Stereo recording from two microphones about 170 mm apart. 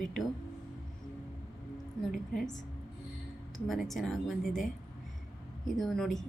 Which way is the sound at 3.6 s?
Centre (ahead or behind).